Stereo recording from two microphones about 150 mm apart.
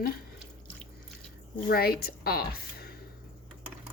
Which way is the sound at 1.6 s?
90° left.